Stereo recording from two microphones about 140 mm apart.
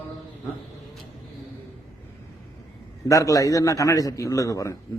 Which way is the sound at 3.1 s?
25° left (ahead or behind).